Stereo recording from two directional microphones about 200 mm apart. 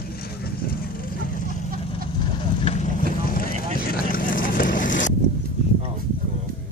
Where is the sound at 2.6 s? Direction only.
35° left (ahead or behind).